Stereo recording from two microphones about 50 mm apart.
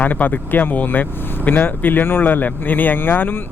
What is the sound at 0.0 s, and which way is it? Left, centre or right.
Speech, left.